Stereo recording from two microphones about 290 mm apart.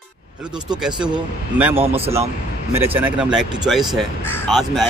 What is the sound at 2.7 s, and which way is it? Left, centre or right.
Speech, centre.